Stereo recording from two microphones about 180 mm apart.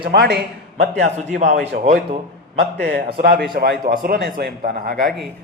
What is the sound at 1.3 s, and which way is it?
Speech, 40° right (ahead or behind).